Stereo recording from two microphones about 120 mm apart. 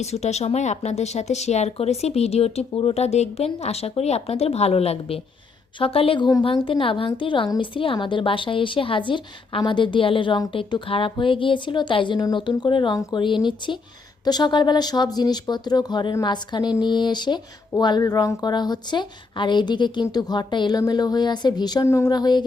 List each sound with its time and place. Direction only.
0.0 s a woman's voice: 65° left (ahead or behind); by 22.4 s 35° left (ahead or behind)